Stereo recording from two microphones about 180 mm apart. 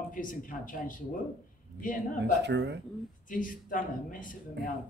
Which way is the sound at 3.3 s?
50° left (ahead or behind).